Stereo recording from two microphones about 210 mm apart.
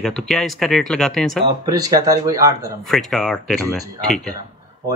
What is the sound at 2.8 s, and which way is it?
Speech, centre (ahead or behind).